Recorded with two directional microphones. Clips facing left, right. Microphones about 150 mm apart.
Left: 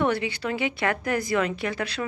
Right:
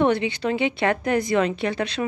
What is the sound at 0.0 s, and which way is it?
A woman's voice, 25° right (ahead or behind).